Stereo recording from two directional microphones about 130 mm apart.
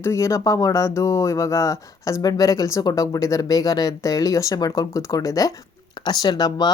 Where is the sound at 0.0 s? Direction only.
20° left (ahead or behind).